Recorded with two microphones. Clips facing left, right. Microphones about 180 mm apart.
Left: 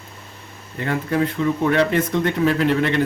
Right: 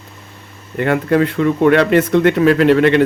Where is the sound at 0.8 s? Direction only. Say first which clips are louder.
Right 7 dB; 70° right (ahead or behind).